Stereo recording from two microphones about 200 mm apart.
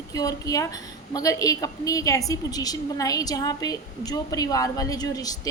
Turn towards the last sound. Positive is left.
turn(degrees=20)  # may be behind; listen again after turning